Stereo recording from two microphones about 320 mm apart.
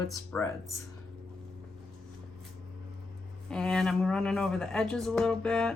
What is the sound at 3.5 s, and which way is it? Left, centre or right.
A woman's voice, centre.